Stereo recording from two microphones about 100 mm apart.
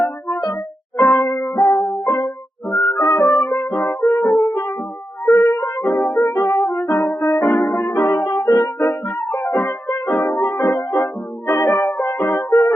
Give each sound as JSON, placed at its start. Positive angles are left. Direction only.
{"t": 0.3, "sound": "music", "side_deg": 45}
{"t": 1.4, "sound": "music", "side_deg": 5}
{"t": 5.5, "sound": "music", "side_deg": 45}
{"t": 5.8, "sound": "music", "side_deg": 5}
{"t": 6.3, "sound": "music", "side_deg": 45}
{"t": 6.6, "sound": "music", "side_deg": 5}
{"t": 7.8, "sound": "music", "side_deg": 45}
{"t": 8.8, "sound": "music", "side_deg": 5}
{"t": 10.8, "sound": "music", "side_deg": 45}
{"t": 12.4, "sound": "music", "side_deg": 5}